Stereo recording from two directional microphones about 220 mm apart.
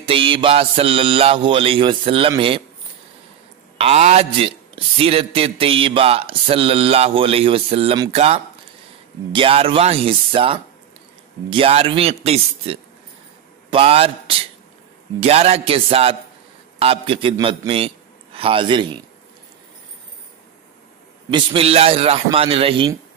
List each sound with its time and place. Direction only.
0.0 s a man's voice: 25° right (ahead or behind)
3.7 s a man's voice: 30° right (ahead or behind)
21.3 s a man's voice: 20° right (ahead or behind)